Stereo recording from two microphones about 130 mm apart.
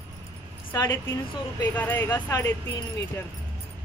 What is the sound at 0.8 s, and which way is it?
Speech, 20° left (ahead or behind).